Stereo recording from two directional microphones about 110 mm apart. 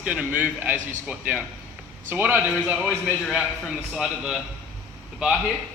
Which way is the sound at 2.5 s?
5° right (ahead or behind).